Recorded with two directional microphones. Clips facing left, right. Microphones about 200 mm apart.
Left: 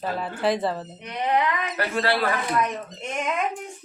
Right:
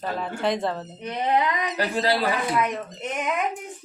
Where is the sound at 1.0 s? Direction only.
25° right (ahead or behind).